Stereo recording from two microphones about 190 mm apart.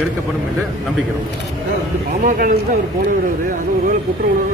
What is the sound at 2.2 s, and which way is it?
Speech, 50° right (ahead or behind).